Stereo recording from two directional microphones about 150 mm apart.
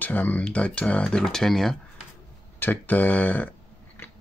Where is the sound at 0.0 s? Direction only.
10° left (ahead or behind).